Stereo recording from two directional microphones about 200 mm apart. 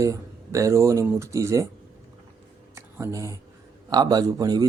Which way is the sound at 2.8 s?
15° right (ahead or behind).